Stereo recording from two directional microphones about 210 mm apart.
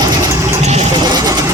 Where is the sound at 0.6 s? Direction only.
35° right (ahead or behind).